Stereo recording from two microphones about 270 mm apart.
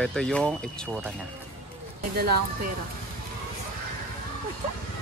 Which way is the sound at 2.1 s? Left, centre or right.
Right.